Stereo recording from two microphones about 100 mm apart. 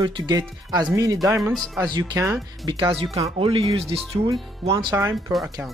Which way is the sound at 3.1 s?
75° right (ahead or behind).